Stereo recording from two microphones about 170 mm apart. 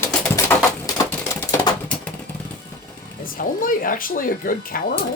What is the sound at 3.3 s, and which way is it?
Speech, 55° left (ahead or behind).